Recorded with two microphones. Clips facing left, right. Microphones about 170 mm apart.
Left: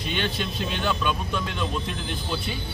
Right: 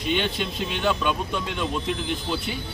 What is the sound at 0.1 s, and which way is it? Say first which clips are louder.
Speech: right 3 dB; 15° right (ahead or behind).